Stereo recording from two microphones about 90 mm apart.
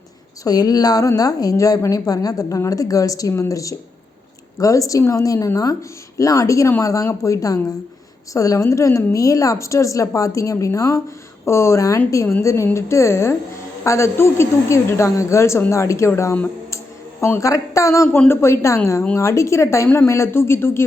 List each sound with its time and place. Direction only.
0.4 s a woman's voice: 45° left (ahead or behind); by 20.8 s 30° left (ahead or behind)